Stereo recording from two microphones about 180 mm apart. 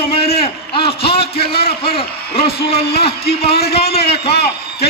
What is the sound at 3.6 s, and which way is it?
Speech, 35° left (ahead or behind).